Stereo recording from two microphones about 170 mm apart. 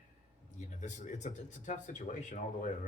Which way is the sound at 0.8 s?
45° left (ahead or behind).